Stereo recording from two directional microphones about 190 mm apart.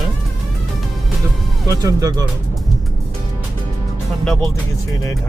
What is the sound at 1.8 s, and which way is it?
Speech, 20° right (ahead or behind).